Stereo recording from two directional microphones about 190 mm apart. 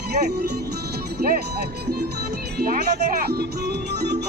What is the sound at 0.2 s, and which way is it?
Speech, 55° right (ahead or behind).